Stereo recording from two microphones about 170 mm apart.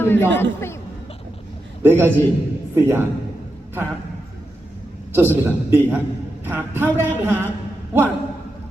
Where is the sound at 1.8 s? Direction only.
10° right (ahead or behind).